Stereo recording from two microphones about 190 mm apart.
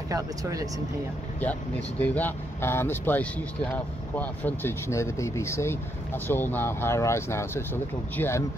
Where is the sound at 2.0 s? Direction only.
10° left (ahead or behind).